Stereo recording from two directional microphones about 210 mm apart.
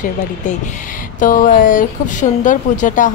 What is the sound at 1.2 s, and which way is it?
A woman's voice, 40° left (ahead or behind).